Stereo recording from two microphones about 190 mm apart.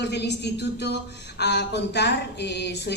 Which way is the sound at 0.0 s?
60° left (ahead or behind).